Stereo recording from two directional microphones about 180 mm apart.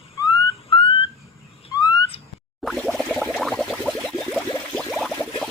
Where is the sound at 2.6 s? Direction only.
Centre (ahead or behind).